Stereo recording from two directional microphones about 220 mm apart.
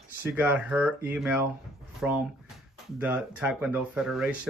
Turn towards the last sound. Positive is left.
turn(degrees=0)  # may be behind; listen again after turning